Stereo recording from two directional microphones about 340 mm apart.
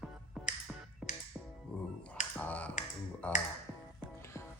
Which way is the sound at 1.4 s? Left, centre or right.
Centre.